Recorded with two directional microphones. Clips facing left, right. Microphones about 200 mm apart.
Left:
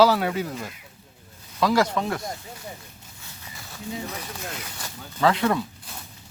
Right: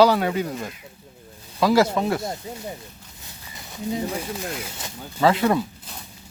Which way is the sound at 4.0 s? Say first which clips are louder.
Right 7 dB; 30° right (ahead or behind).